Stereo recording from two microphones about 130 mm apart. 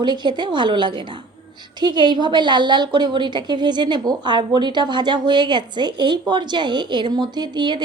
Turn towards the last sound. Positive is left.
turn(degrees=-35)  # may be behind; listen again after turning